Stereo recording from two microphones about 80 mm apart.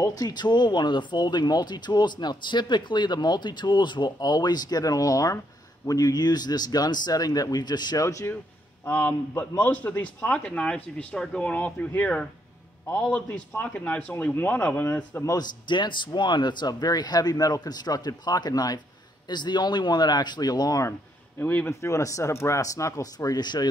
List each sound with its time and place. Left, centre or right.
0.1 s speech: left
8.0 s speech: left
8.8 s a man's voice: left
15.6 s speech: left
19.2 s speech: left
21.4 s a man's voice: left
21.6 s a man's voice: left
23.1 s speech: left